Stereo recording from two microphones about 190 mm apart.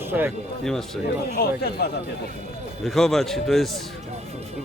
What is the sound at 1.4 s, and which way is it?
Speech, 55° left (ahead or behind).